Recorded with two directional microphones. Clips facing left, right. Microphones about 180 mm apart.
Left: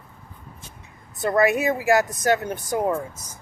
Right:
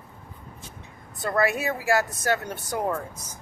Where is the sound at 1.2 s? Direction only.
20° left (ahead or behind).